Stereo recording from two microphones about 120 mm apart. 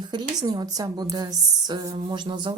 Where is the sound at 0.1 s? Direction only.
35° right (ahead or behind).